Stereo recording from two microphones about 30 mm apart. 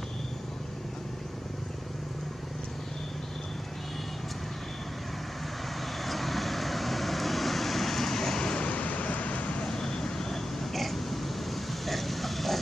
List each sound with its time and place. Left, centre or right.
6.0 s vehicle: centre
8.4 s vehicle: left
8.6 s vehicle: left
9.7 s vehicle: left
10.3 s a sound: centre